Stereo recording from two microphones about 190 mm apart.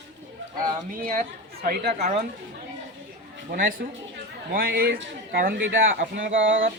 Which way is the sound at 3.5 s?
45° right (ahead or behind).